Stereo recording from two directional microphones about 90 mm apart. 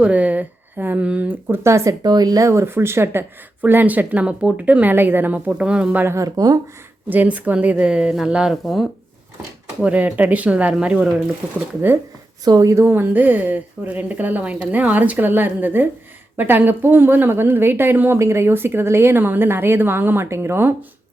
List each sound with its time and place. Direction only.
0.0 s speech: 15° right (ahead or behind); by 2.5 s 45° right (ahead or behind)
2.5 s speech: 30° right (ahead or behind)
5.5 s a woman's voice: 10° right (ahead or behind)
6.1 s speech: 40° right (ahead or behind)
7.1 s a woman's voice: 15° right (ahead or behind); by 8.9 s centre (ahead or behind)
9.8 s a woman's voice: 15° right (ahead or behind)
12.5 s speech: 40° right (ahead or behind)
12.8 s speech: 20° right (ahead or behind)